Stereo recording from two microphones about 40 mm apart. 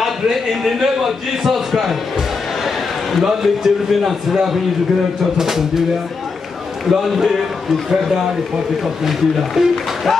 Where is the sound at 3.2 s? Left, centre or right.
Centre.